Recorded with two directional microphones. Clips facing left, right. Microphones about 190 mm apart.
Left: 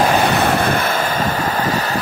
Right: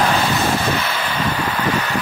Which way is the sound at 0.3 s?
60° left (ahead or behind).